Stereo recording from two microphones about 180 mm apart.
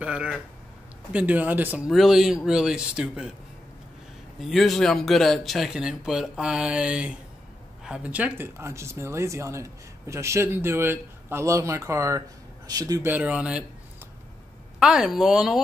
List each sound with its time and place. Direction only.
0.0 s speech: 5° right (ahead or behind)
4.4 s speech: centre (ahead or behind); by 13.1 s 20° right (ahead or behind)
13.1 s speech: 10° right (ahead or behind)
14.8 s speech: 5° right (ahead or behind)